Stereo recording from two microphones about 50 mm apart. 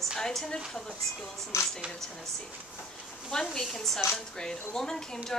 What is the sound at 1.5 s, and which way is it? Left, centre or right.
Speech, left.